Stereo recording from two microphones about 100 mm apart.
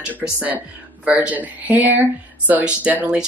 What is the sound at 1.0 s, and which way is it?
Speech, 15° right (ahead or behind).